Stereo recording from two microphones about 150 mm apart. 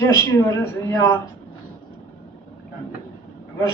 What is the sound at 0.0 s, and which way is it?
Speech, 15° left (ahead or behind).